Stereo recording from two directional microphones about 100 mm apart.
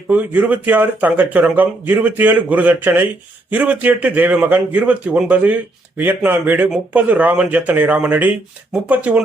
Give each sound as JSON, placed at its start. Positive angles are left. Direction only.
{"t": 0.1, "sound": "speech", "side_deg": -15}